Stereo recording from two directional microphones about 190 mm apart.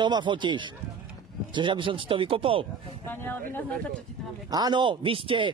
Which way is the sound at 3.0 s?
10° left (ahead or behind).